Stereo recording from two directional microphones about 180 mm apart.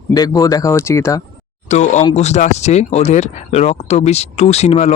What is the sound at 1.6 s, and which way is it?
Speech, 40° left (ahead or behind).